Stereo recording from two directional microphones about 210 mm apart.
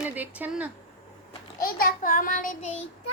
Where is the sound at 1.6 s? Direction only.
45° left (ahead or behind).